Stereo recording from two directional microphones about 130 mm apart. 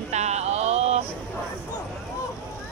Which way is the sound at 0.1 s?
60° right (ahead or behind).